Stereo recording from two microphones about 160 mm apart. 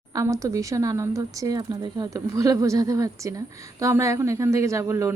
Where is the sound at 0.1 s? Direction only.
20° right (ahead or behind).